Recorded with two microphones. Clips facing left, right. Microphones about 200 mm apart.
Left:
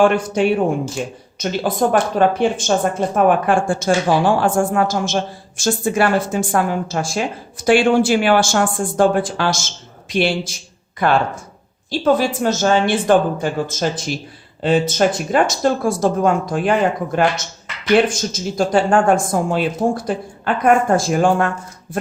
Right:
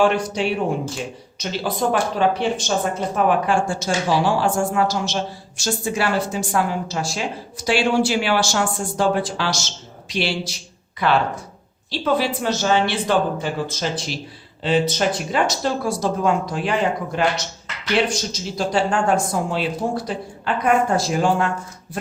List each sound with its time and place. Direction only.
0.0 s a woman's voice: 50° left (ahead or behind)